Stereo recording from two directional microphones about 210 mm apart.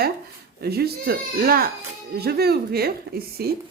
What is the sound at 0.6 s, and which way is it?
Speech, 50° right (ahead or behind).